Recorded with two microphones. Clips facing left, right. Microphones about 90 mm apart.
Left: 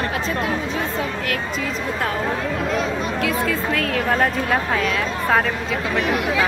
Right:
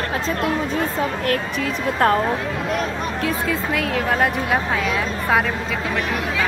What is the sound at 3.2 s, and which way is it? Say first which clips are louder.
Speech: even; 25° right (ahead or behind).